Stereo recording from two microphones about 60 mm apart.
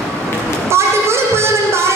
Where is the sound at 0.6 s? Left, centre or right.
Right.